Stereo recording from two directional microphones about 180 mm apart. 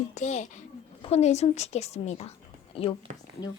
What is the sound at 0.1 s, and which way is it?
A woman's voice, 40° left (ahead or behind).